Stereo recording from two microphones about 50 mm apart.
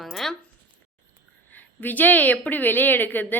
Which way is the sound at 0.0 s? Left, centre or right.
Centre.